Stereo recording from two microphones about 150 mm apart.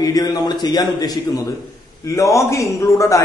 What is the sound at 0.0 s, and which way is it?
A man's voice, 25° left (ahead or behind).